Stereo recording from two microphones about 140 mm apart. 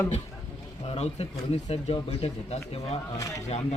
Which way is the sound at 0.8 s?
45° left (ahead or behind).